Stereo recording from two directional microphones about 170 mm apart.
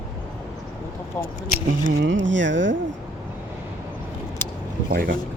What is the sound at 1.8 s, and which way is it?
Speech, 90° right.